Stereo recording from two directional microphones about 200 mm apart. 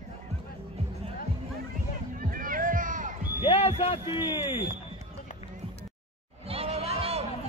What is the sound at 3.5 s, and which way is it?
Speech, 30° left (ahead or behind).